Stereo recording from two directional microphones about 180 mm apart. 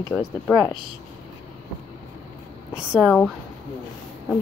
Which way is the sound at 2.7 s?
5° right (ahead or behind).